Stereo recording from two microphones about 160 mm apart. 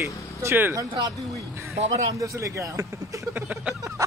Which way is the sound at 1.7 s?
40° right (ahead or behind).